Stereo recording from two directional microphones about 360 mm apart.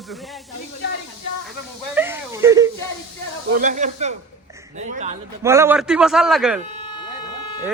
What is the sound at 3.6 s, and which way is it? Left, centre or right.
Speech, right.